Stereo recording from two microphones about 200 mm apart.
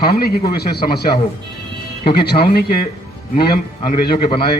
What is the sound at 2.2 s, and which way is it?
A man's voice, 50° left (ahead or behind).